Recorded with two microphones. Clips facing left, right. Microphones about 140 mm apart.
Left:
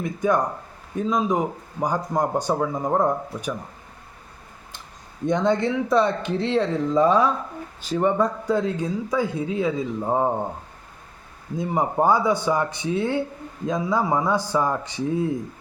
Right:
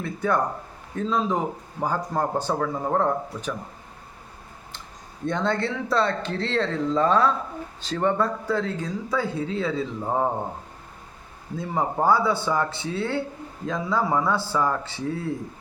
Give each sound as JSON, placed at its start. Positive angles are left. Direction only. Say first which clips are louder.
{"t": 0.0, "sound": "speech", "louder": "left 2 dB", "side_deg": 15}
{"t": 5.2, "sound": "speech", "louder": "left 4 dB", "side_deg": 15}
{"t": 11.5, "sound": "speech", "louder": "left 3 dB", "side_deg": 15}